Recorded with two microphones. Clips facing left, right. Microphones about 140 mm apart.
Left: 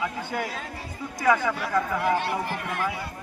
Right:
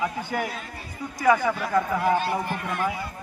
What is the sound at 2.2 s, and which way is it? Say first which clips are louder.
Speech: right 1 dB; 90° left.